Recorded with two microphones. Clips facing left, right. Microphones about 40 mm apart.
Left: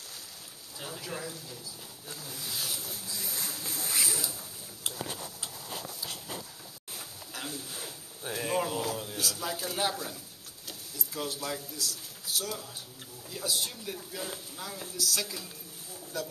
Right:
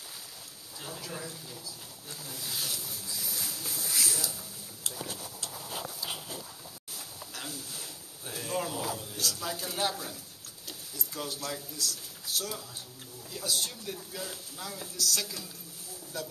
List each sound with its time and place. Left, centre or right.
0.7 s a man's voice: centre
3.3 s a sound: left
4.8 s speech: left
7.0 s a sound: centre
8.9 s speech: centre
9.2 s a man's voice: centre
16.1 s a man's voice: centre